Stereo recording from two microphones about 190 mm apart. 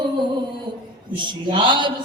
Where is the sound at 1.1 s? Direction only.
25° right (ahead or behind).